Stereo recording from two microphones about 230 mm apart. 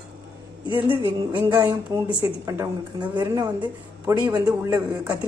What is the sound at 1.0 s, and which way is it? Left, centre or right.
A man's voice, centre.